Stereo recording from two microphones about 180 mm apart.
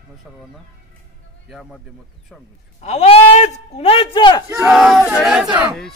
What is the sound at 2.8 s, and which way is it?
Speech, 35° left (ahead or behind).